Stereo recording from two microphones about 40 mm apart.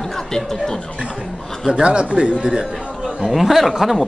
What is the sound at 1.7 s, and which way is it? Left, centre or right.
Speech, right.